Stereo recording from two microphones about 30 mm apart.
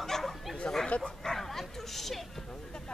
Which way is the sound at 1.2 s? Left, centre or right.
Centre.